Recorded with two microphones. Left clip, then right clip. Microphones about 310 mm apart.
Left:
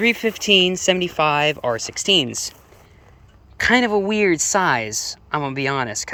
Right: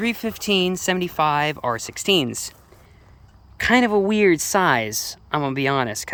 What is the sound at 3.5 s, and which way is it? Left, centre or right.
Speech, centre.